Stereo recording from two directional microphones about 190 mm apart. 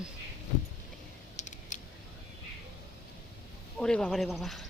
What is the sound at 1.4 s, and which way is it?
Typing, 40° left (ahead or behind).